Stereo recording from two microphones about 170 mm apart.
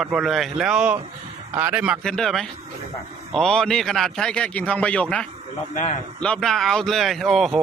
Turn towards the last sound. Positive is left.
turn(degrees=0)  # may be behind; listen again after turning